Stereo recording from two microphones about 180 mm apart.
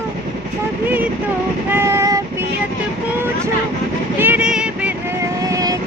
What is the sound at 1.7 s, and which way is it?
Child singing, 15° right (ahead or behind).